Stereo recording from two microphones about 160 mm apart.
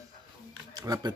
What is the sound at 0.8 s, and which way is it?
Speech, 20° right (ahead or behind).